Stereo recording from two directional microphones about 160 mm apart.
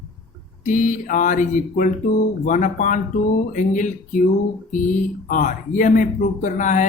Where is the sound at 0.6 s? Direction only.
50° left (ahead or behind).